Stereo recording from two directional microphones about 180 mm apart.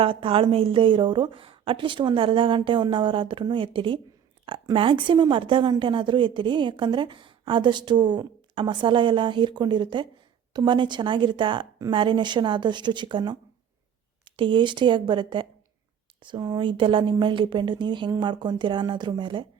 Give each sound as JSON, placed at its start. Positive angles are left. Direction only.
{"t": 0.0, "sound": "a woman's voice", "side_deg": -30}